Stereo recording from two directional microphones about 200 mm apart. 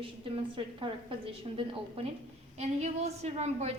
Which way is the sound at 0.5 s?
25° right (ahead or behind).